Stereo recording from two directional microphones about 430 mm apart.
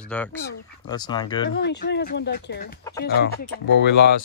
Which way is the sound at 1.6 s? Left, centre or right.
Left.